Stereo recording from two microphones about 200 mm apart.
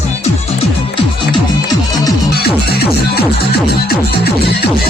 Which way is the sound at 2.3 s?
55° left (ahead or behind).